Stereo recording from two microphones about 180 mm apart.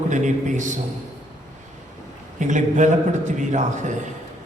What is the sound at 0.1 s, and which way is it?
Speech, 45° right (ahead or behind).